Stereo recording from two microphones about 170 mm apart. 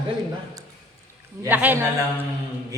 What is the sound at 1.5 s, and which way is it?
Speech, 10° right (ahead or behind).